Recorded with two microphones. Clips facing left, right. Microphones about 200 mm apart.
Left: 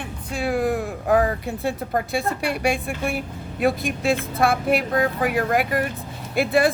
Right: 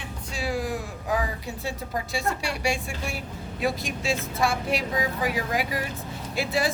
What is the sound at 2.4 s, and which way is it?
Speech, 55° left (ahead or behind).